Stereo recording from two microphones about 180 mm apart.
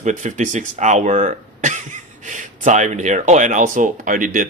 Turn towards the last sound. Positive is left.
turn(degrees=-50)  # may be behind; listen again after turning